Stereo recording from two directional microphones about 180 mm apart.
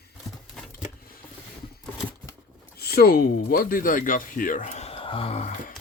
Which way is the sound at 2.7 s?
60° left (ahead or behind).